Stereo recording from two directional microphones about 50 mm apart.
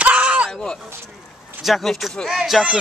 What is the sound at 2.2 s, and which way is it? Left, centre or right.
Speech, centre.